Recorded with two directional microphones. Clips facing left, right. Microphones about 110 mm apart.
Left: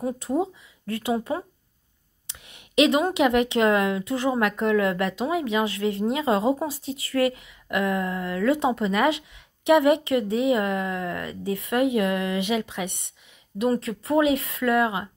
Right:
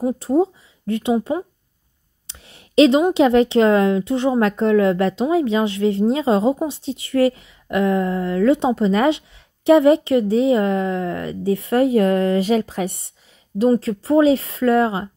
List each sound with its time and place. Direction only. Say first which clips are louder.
0.0 s a woman's voice: right 7 dB; 30° right (ahead or behind)